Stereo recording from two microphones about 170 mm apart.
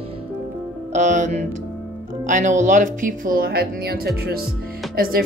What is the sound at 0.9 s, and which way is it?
A woman's voice, 45° right (ahead or behind).